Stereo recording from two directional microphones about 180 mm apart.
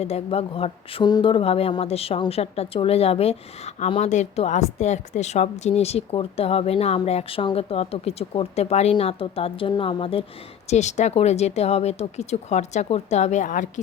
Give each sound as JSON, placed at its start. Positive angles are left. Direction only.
{"t": 0.0, "sound": "speech", "side_deg": 35}